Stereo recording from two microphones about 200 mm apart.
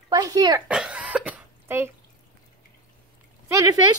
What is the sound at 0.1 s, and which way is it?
Speech, 20° right (ahead or behind).